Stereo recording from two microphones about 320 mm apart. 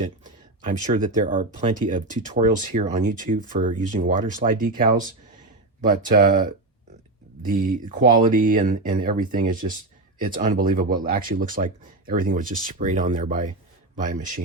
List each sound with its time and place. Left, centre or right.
0.6 s a man's voice: right